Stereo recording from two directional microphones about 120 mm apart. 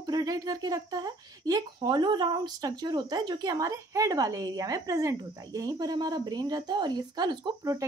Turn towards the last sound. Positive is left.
turn(degrees=-30)  # may be behind; listen again after turning